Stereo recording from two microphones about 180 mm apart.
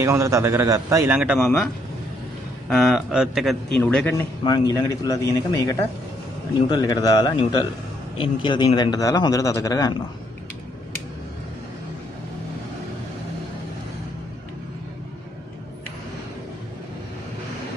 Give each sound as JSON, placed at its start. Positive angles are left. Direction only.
{"t": 0.0, "sound": "a man's voice", "side_deg": -15}
{"t": 4.4, "sound": "speech", "side_deg": 20}